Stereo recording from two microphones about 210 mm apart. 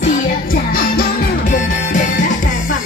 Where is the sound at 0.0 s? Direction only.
40° left (ahead or behind).